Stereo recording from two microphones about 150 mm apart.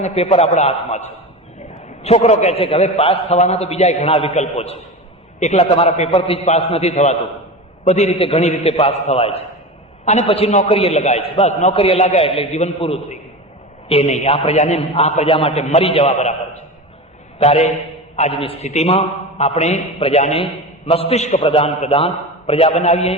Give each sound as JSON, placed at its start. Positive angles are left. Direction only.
{"t": 0.0, "sound": "a man's voice", "side_deg": 45}